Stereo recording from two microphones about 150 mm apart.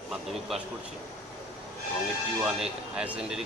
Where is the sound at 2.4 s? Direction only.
5° right (ahead or behind).